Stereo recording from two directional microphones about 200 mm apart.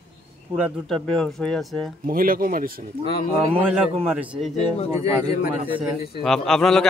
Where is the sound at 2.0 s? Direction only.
45° right (ahead or behind).